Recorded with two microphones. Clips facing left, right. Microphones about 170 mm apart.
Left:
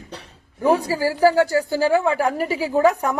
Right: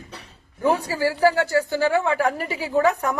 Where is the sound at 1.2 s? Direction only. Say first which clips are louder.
Left 3 dB; 10° left (ahead or behind).